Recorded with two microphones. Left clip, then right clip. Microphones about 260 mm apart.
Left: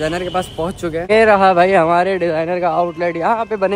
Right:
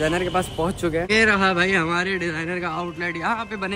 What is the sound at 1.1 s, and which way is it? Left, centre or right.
A man's voice, centre.